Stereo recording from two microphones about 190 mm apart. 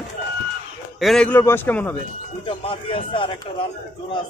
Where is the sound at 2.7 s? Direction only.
30° left (ahead or behind).